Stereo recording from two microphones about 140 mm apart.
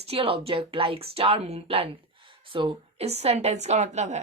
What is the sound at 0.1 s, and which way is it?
A woman's voice, 40° right (ahead or behind).